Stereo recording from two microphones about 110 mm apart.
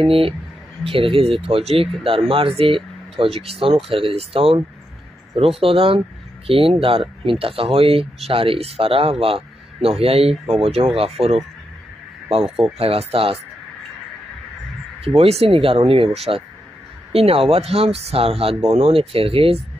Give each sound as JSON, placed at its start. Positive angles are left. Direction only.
{"t": 0.0, "sound": "speech", "side_deg": -55}
{"t": 5.6, "sound": "speech", "side_deg": -55}
{"t": 12.7, "sound": "speech", "side_deg": -60}
{"t": 15.0, "sound": "speech", "side_deg": -65}